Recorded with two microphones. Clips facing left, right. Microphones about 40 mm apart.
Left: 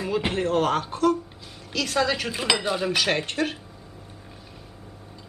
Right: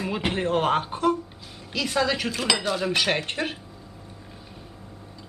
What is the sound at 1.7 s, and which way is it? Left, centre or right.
Speech, centre.